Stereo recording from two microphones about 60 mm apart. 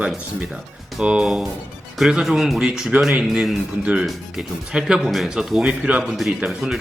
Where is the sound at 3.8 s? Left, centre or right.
Centre.